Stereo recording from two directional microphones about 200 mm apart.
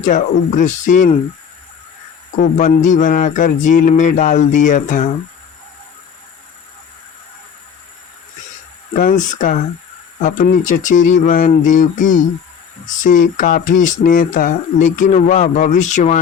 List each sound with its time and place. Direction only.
0.0 s speech: 40° left (ahead or behind)
2.4 s speech: 40° left (ahead or behind)
8.9 s speech: 40° left (ahead or behind)